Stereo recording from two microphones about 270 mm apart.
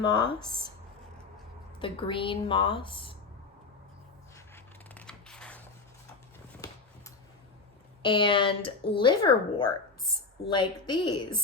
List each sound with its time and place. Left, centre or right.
0.0 s a woman's voice: centre
1.8 s speech: centre
4.4 s a sound: centre
8.0 s a woman's voice: centre